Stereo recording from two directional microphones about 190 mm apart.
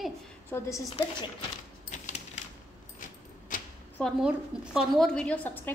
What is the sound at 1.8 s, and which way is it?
Typewriter, 40° left (ahead or behind).